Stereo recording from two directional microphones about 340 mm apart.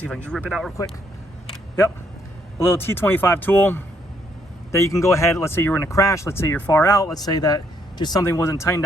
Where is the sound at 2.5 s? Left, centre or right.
Centre.